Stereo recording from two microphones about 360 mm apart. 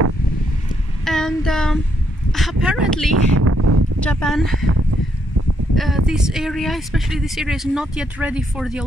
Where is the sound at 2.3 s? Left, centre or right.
Centre.